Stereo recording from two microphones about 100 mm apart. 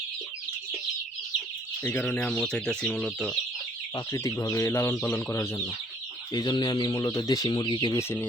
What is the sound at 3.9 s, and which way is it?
Speech, 30° left (ahead or behind).